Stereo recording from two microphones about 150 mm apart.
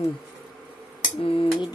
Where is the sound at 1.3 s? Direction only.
35° left (ahead or behind).